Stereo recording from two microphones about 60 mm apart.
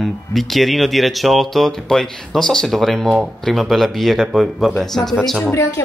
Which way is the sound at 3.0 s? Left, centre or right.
Centre.